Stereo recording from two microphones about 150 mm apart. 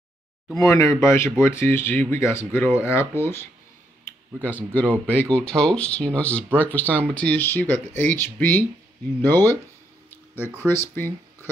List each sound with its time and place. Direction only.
0.6 s speech: 20° left (ahead or behind)
10.7 s speech: 15° left (ahead or behind)